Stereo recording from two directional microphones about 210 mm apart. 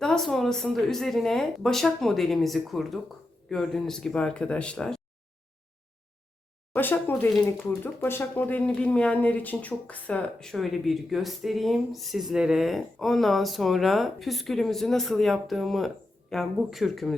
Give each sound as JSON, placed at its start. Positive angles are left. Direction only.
{"t": 0.0, "sound": "speech", "side_deg": 5}
{"t": 6.7, "sound": "speech", "side_deg": 10}